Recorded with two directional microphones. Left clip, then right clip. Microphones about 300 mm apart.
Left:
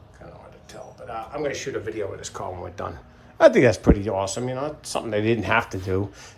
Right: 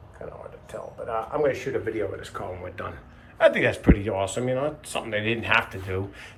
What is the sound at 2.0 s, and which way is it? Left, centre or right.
Speech, centre.